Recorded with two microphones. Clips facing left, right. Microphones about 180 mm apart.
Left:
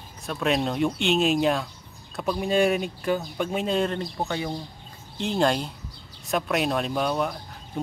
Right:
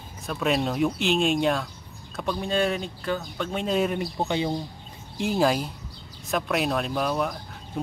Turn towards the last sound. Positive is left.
turn(degrees=0)  # may be behind; listen again after turning